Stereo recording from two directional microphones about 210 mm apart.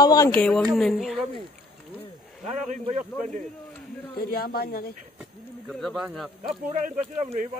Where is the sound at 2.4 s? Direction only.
35° right (ahead or behind).